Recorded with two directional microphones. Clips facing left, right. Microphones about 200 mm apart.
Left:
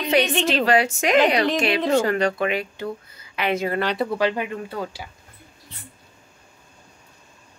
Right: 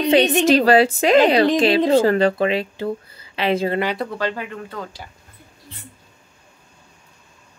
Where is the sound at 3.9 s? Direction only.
10° left (ahead or behind).